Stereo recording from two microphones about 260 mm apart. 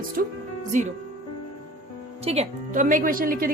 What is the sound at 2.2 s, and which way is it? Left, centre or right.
Speech, right.